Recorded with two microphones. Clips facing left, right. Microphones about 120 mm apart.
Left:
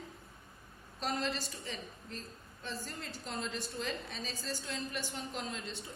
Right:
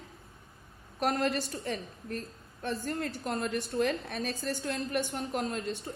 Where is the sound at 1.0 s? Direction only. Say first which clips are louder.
Right 7 dB; 60° right (ahead or behind).